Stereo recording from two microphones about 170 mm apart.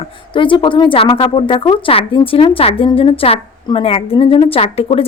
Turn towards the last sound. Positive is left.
turn(degrees=35)  # may be behind; listen again after turning